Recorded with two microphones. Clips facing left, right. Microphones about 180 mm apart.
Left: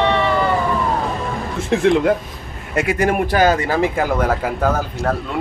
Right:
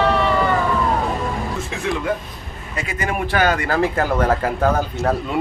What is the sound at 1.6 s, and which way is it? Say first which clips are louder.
Speech: left 11 dB; 70° left (ahead or behind).